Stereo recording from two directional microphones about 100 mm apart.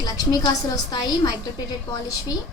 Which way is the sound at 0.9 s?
40° left (ahead or behind).